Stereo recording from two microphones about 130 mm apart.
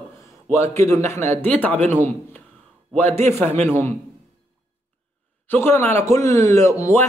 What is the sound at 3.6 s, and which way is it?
Speech, 20° left (ahead or behind).